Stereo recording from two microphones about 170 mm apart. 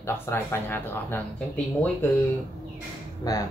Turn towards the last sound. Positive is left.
turn(degrees=20)  # may be behind; listen again after turning